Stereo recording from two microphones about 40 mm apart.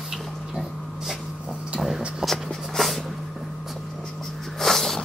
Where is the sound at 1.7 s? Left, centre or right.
Centre.